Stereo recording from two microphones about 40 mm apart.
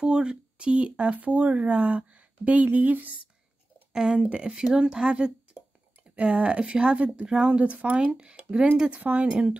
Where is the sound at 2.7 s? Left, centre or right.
Right.